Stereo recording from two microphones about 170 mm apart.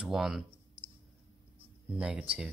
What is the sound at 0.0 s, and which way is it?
Speech, centre (ahead or behind).